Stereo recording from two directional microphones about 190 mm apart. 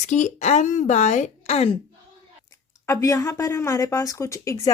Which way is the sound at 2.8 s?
15° left (ahead or behind).